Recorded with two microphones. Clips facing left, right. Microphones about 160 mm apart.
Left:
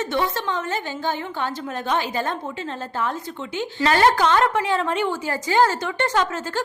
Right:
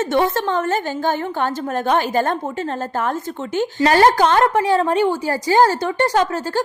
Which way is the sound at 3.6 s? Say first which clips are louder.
Right 5 dB; 40° right (ahead or behind).